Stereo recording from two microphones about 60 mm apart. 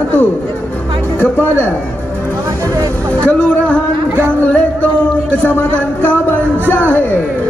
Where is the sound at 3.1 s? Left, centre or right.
Left.